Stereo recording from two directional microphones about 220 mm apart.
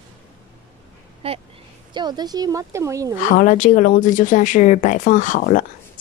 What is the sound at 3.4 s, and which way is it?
Speech, 35° left (ahead or behind).